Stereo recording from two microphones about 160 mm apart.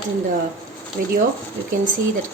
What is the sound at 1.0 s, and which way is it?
Speech, 85° right.